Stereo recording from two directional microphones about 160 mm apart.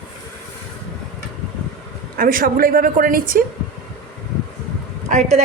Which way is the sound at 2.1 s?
65° right (ahead or behind).